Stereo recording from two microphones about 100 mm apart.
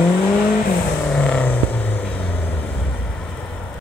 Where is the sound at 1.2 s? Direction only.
15° left (ahead or behind).